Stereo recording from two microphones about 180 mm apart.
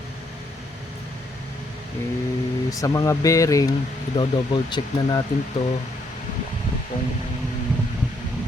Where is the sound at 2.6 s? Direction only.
20° left (ahead or behind).